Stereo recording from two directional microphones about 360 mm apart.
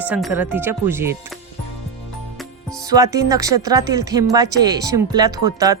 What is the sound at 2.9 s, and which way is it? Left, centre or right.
Speech, centre.